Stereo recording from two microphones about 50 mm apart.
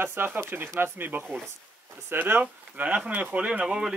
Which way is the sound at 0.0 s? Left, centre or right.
Right.